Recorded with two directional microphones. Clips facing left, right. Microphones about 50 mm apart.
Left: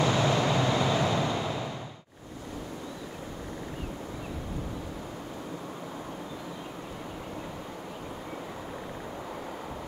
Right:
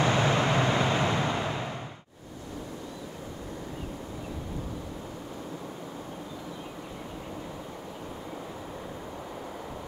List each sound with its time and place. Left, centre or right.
0.0 s vehicle: right